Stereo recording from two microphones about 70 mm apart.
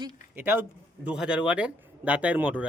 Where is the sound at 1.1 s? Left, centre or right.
Centre.